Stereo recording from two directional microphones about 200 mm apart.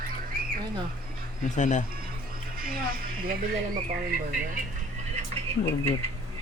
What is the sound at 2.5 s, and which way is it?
Speech, 45° right (ahead or behind).